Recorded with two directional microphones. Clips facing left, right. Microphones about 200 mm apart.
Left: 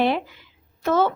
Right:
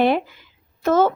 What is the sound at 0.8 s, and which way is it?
Speech, 45° right (ahead or behind).